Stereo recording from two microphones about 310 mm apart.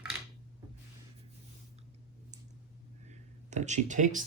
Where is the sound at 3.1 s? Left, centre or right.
Right.